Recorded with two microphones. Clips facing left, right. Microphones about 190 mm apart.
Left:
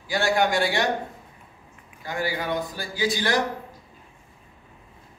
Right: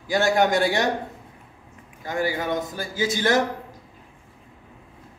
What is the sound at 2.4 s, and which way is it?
Speech, 20° right (ahead or behind).